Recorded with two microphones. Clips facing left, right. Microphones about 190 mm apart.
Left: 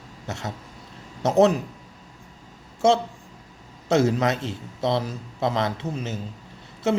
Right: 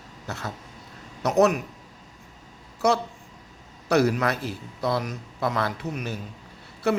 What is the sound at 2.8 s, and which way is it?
A woman's voice, 25° left (ahead or behind).